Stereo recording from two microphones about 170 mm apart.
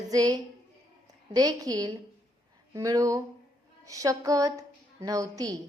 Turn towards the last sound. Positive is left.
turn(degrees=-20)  # may be behind; listen again after turning